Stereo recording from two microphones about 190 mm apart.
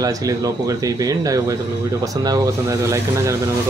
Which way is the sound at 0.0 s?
20° right (ahead or behind).